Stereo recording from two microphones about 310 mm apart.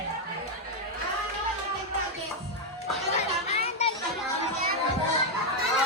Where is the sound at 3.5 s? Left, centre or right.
Centre.